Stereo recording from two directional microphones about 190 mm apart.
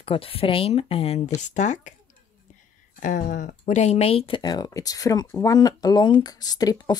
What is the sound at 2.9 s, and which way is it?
Speech, 45° left (ahead or behind).